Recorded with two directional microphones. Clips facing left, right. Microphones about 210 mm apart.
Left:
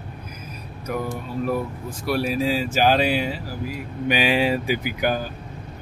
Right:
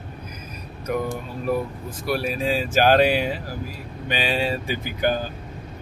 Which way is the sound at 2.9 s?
50° right (ahead or behind).